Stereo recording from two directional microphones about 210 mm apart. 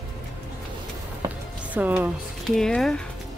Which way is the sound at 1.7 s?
10° right (ahead or behind).